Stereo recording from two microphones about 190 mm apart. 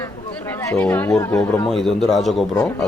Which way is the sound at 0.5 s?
10° left (ahead or behind).